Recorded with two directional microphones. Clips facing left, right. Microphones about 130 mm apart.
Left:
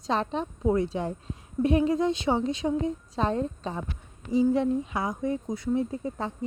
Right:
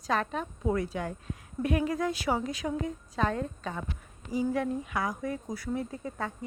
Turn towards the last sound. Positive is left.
turn(degrees=25)  # may be behind; listen again after turning